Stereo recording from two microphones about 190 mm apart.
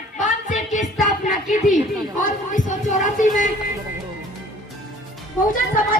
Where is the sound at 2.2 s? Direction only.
40° left (ahead or behind).